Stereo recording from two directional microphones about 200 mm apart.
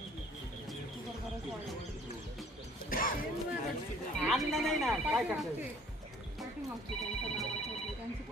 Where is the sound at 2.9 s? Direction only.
45° left (ahead or behind).